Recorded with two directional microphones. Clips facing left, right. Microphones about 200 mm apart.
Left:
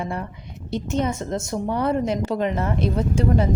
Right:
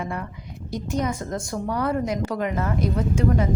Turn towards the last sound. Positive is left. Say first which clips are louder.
# left 1 dB
turn(degrees=30)  # may be behind; listen again after turning